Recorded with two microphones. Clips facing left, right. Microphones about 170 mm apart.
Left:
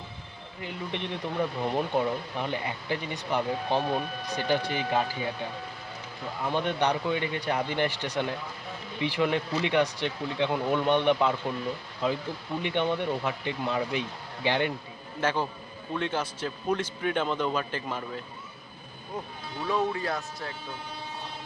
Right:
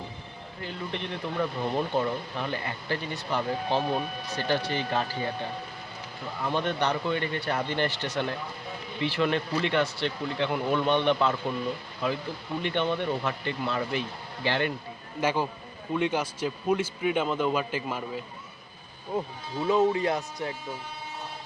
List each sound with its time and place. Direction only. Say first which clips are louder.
0.6 s speech: even; 15° left (ahead or behind)
12.6 s speech: even; 15° left (ahead or behind)
15.2 s speech: right 1 dB; 10° right (ahead or behind)
19.6 s speech: right 5 dB; 20° right (ahead or behind)